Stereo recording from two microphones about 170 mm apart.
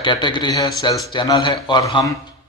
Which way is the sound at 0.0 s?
30° left (ahead or behind).